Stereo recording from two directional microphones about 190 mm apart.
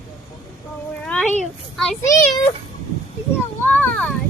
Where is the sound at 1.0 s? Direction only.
5° left (ahead or behind).